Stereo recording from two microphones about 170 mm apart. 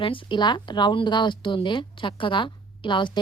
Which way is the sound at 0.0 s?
30° left (ahead or behind).